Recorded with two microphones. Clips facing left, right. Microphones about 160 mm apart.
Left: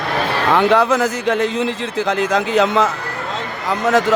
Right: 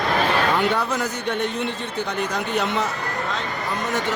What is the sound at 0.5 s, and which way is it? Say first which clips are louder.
Speech: left 8 dB; 90° left.